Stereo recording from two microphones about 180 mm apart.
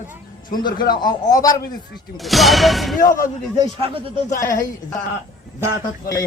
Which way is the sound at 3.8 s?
30° right (ahead or behind).